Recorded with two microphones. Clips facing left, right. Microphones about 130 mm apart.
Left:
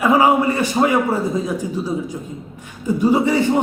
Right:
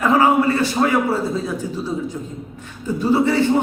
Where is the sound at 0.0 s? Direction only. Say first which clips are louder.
Left 1 dB; 10° left (ahead or behind).